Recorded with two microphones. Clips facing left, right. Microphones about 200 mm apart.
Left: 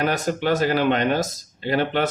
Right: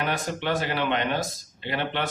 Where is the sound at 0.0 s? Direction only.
40° left (ahead or behind).